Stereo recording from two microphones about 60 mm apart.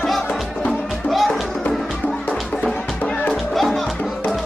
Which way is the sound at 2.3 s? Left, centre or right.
Left.